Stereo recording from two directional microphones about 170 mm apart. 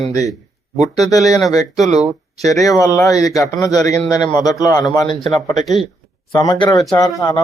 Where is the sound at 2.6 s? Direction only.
20° left (ahead or behind).